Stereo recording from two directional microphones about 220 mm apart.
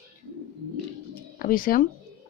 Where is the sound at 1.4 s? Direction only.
40° left (ahead or behind).